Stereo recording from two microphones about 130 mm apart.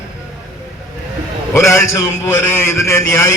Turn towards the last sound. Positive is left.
turn(degrees=20)  # may be behind; listen again after turning